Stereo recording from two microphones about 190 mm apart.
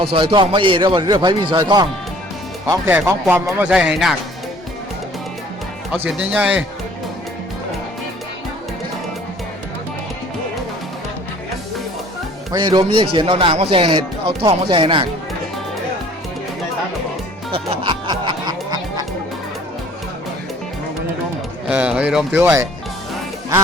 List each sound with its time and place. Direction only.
0.0 s a man's voice: 30° right (ahead or behind)
2.6 s speech: 10° right (ahead or behind)
5.9 s speech: 5° right (ahead or behind)
12.5 s a man's voice: 20° right (ahead or behind)
17.5 s music: 25° right (ahead or behind)
21.7 s speech: 5° right (ahead or behind)